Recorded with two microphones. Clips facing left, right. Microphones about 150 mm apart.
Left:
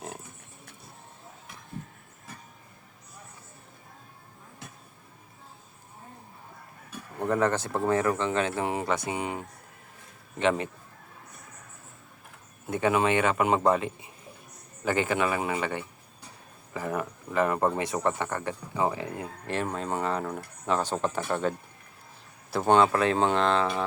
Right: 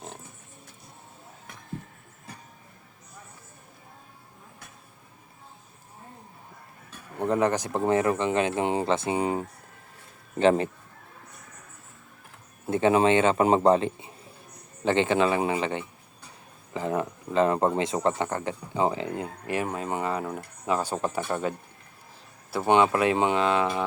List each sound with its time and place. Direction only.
7.2 s a man's voice: 20° right (ahead or behind); by 10.7 s 35° right (ahead or behind)
12.6 s a man's voice: 30° right (ahead or behind)
19.5 s speech: 10° right (ahead or behind)
22.5 s speech: 15° right (ahead or behind)